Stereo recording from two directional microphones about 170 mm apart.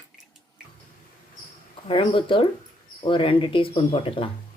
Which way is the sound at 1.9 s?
30° left (ahead or behind).